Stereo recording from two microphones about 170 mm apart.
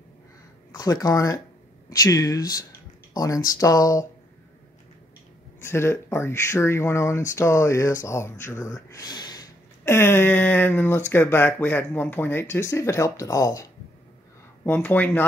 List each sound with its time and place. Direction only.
0.7 s speech: 20° left (ahead or behind)
5.7 s speech: 15° left (ahead or behind)